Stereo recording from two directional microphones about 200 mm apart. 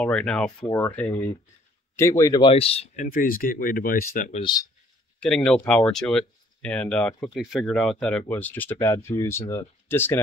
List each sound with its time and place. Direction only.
0.0 s speech: 5° left (ahead or behind); by 3.1 s 30° left (ahead or behind)
3.1 s speech: 45° left (ahead or behind)
4.4 s speech: 20° left (ahead or behind)
5.2 s speech: 5° left (ahead or behind)